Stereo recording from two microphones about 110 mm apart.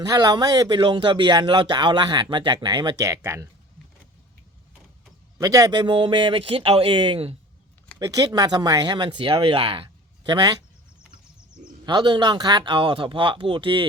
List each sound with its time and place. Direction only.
0.0 s speech: 35° right (ahead or behind)
3.0 s speech: 25° right (ahead or behind)
5.4 s speech: 30° right (ahead or behind)
5.8 s speech: 50° right (ahead or behind)
7.9 s speech: 30° right (ahead or behind); by 9.9 s 55° right (ahead or behind)
10.2 s speech: 35° right (ahead or behind)
11.9 s speech: 45° right (ahead or behind)